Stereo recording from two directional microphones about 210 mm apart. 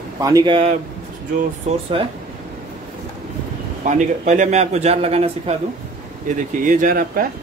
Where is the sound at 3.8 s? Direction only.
35° right (ahead or behind).